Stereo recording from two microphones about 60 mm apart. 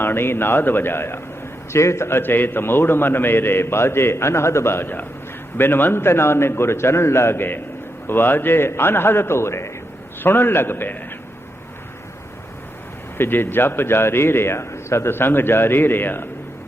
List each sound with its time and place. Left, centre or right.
0.0 s a man's voice: left
13.1 s a man's voice: left